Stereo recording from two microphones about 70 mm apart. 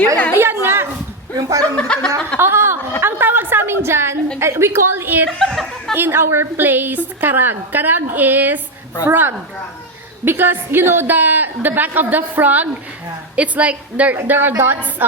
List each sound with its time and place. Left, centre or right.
0.3 s a woman's voice: right
1.4 s speech: right
1.7 s a sound: centre
2.4 s a woman's voice: right
5.4 s speech: centre
5.9 s a woman's voice: right
14.2 s a woman's voice: right